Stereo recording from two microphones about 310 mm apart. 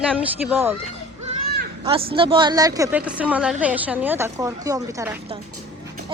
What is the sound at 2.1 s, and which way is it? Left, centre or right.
A woman's voice, centre.